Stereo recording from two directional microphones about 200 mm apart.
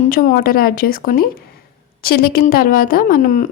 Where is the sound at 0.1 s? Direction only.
45° left (ahead or behind).